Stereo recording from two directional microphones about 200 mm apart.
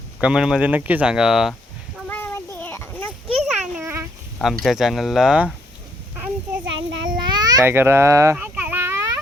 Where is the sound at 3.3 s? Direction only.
Centre (ahead or behind).